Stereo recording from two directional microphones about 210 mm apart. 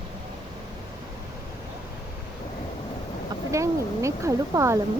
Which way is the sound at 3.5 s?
15° right (ahead or behind).